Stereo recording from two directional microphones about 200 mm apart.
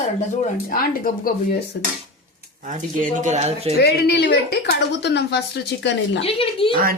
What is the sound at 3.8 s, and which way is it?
Speech, 55° left (ahead or behind).